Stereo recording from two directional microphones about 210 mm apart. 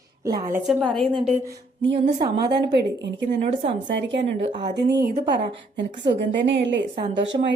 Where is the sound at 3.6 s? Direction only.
30° right (ahead or behind).